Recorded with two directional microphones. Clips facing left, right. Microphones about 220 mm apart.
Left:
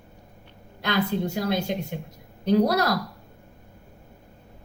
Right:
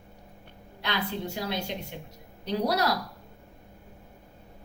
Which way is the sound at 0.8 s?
45° left (ahead or behind).